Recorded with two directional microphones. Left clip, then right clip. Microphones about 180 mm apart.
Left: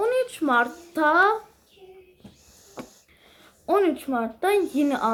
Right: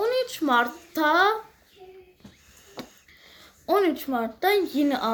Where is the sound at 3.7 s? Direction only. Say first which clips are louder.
Left 1 dB; 5° right (ahead or behind).